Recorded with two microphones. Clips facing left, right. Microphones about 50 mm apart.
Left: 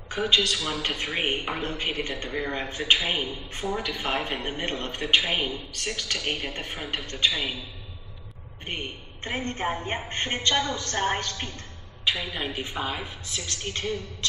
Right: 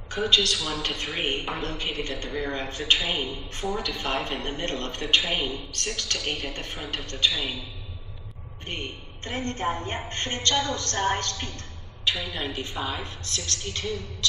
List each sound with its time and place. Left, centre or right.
0.1 s a woman's voice: centre
3.8 s a man's voice: centre
5.2 s a woman's voice: left
5.7 s a man's voice: centre
7.3 s a man's voice: left
8.6 s a woman's voice: centre
13.7 s a man's voice: left